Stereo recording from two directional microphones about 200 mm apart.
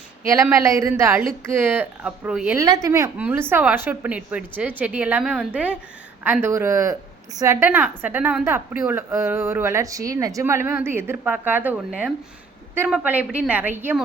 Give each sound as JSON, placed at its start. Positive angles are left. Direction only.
{"t": 0.3, "sound": "a woman's voice", "side_deg": -15}
{"t": 2.6, "sound": "a woman's voice", "side_deg": -15}